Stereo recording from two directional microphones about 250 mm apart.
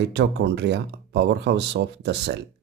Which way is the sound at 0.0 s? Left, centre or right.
Right.